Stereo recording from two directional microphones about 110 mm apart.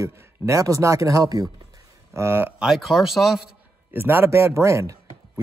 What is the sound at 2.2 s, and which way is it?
Speech, 20° right (ahead or behind).